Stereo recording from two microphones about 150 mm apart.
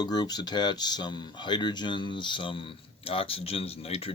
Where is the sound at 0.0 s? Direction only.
30° left (ahead or behind).